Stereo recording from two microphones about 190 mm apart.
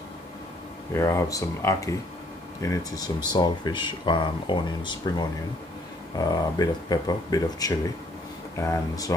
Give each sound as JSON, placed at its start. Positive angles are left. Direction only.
{"t": 0.9, "sound": "speech", "side_deg": 15}